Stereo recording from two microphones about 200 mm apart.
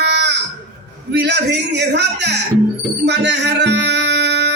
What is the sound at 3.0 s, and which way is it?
Music, 55° right (ahead or behind).